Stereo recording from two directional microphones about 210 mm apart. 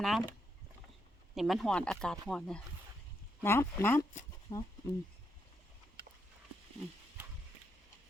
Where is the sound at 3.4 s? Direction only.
10° left (ahead or behind).